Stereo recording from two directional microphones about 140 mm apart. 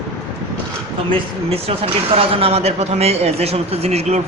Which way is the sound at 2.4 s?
45° right (ahead or behind).